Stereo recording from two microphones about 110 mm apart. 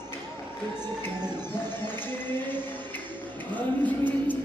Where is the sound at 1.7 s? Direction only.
20° left (ahead or behind).